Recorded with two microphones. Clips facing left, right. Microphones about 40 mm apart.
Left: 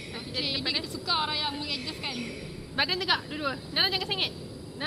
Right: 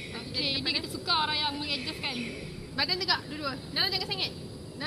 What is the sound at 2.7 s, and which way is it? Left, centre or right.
A woman's voice, left.